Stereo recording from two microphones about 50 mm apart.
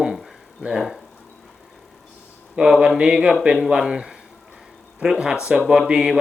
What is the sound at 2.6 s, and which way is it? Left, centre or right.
Speech, centre.